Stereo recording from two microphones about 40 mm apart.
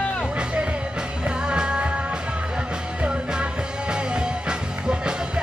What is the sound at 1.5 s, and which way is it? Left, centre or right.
Music, right.